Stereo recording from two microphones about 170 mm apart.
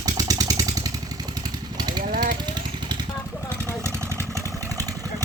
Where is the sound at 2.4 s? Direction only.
25° right (ahead or behind).